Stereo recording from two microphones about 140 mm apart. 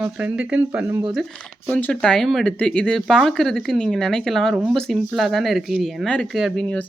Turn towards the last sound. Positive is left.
turn(degrees=0)  # may be behind; listen again after turning